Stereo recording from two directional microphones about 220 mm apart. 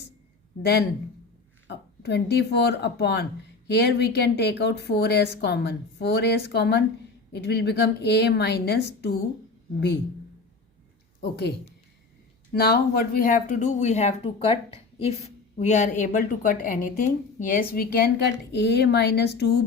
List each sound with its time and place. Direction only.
0.6 s speech: 50° left (ahead or behind)
1.6 s a sound: 50° left (ahead or behind)
2.6 s speech: 50° left (ahead or behind)
11.2 s speech: 50° left (ahead or behind)
12.5 s speech: 45° left (ahead or behind)